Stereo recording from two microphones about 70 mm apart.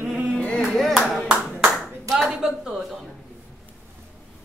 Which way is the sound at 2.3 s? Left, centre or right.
Centre.